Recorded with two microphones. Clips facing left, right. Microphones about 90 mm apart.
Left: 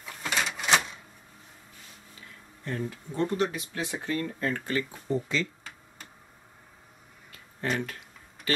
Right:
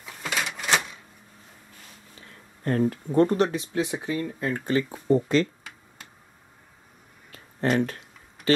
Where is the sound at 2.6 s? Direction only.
55° right (ahead or behind).